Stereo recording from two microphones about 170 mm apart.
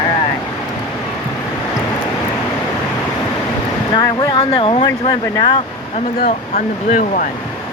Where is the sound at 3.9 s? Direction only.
30° left (ahead or behind).